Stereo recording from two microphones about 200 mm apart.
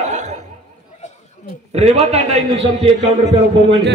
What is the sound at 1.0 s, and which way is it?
Chatter, 35° left (ahead or behind).